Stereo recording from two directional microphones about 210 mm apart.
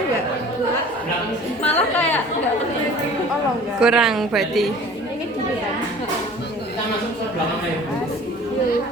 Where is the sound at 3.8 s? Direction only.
5° right (ahead or behind).